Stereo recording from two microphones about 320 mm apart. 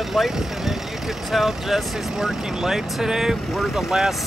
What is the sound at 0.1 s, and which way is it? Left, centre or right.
Speech, centre.